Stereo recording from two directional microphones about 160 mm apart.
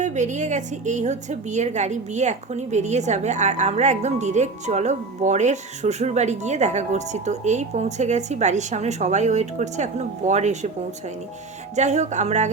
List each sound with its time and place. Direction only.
0.0 s a woman's voice: 50° right (ahead or behind)
11.8 s a woman's voice: 45° right (ahead or behind)